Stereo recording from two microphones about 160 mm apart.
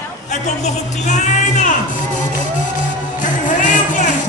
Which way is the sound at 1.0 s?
50° left (ahead or behind).